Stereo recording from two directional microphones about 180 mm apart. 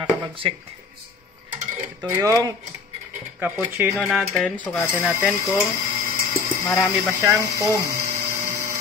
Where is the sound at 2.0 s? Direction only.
15° right (ahead or behind).